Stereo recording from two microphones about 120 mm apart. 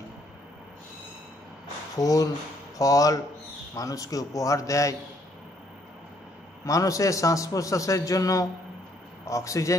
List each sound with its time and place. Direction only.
2.0 s a man's voice: 30° left (ahead or behind)
6.6 s a man's voice: 30° left (ahead or behind)